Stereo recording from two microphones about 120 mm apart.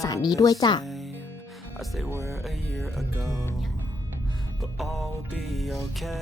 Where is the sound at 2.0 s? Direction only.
25° right (ahead or behind).